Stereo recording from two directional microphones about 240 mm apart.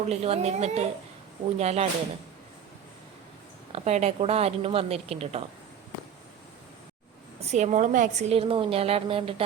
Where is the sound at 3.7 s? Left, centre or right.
Right.